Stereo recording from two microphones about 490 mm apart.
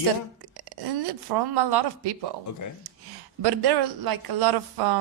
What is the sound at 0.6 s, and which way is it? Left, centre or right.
Speech, right.